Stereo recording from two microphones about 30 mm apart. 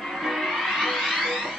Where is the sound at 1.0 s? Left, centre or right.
Centre.